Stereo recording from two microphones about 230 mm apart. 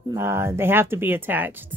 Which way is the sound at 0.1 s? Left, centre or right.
Centre.